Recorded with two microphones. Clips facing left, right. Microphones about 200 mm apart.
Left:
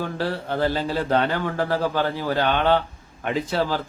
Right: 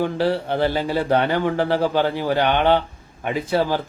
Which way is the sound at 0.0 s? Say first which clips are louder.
Right 6 dB; 15° right (ahead or behind).